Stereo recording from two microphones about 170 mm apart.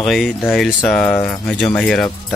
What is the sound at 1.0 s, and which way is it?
Speech, 10° left (ahead or behind).